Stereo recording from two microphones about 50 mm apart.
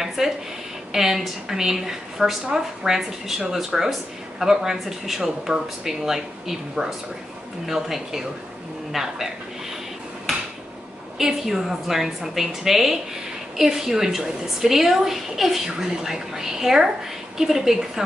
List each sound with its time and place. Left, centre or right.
0.0 s a sound: centre
0.9 s a woman's voice: centre
11.1 s a woman's voice: centre